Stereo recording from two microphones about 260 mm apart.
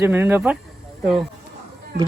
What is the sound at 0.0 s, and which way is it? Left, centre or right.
Speech, centre.